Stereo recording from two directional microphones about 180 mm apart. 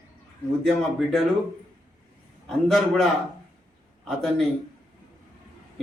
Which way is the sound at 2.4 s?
Centre (ahead or behind).